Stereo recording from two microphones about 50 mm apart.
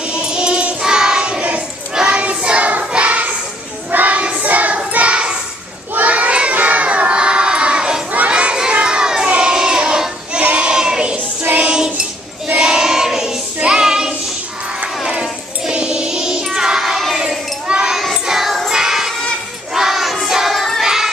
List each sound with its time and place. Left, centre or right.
0.1 s choir: centre
2.0 s child singing: centre
2.8 s singing: right
3.9 s child singing: right
5.9 s crowd: right
8.1 s children shouting: right
10.4 s child singing: right; by 17.2 s centre
17.6 s a sound: centre
17.9 s child singing: centre
18.2 s music: centre
18.7 s child singing: centre
20.8 s music: centre